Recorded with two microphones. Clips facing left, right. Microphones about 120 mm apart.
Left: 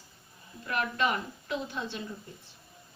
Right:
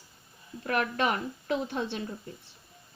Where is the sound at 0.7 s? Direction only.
50° right (ahead or behind).